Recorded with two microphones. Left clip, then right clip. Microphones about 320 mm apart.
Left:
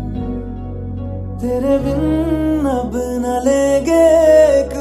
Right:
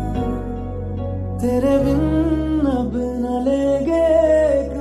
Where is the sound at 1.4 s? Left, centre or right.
Centre; by 3.0 s left.